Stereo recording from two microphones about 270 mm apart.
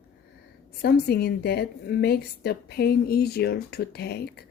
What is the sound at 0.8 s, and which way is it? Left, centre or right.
A woman's voice, left.